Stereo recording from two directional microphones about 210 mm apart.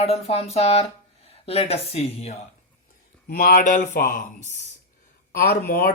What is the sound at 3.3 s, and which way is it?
Speech, 45° left (ahead or behind).